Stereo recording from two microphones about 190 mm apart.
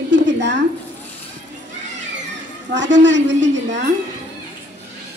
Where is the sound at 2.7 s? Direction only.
70° right (ahead or behind).